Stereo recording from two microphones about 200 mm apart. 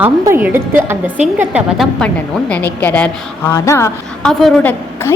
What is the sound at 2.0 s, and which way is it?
A woman's voice, 5° left (ahead or behind).